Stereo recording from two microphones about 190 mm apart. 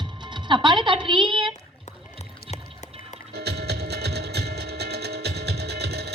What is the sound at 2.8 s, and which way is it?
Music, 40° left (ahead or behind).